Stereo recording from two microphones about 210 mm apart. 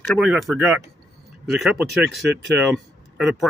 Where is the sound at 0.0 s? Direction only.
Centre (ahead or behind).